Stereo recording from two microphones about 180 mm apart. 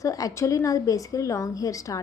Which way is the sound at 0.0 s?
20° left (ahead or behind).